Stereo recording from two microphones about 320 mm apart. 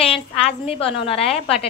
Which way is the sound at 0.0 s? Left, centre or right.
Centre.